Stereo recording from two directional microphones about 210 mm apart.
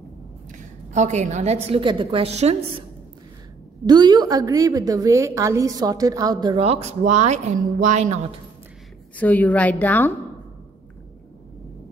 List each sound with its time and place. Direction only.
0.5 s a woman's voice: 35° right (ahead or behind)
3.8 s a woman's voice: 20° right (ahead or behind)
9.1 s a woman's voice: 5° left (ahead or behind)